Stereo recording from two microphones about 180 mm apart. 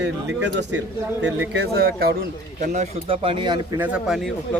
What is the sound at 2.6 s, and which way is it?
Speech, 35° right (ahead or behind).